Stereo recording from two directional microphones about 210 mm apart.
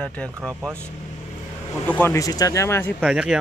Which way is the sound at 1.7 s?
10° left (ahead or behind).